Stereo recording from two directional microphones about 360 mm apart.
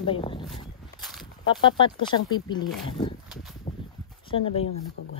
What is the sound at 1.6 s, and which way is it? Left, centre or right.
Speech, centre.